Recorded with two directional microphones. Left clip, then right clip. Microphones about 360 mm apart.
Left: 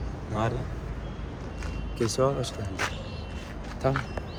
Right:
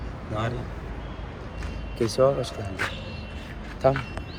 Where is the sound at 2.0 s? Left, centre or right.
Centre.